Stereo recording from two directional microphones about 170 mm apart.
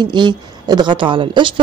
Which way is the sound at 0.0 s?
25° right (ahead or behind).